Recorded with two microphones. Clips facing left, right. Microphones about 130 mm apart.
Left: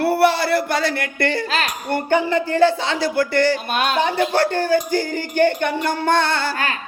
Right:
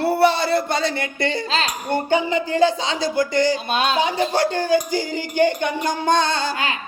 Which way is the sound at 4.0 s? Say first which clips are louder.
Left 1 dB; 15° right (ahead or behind).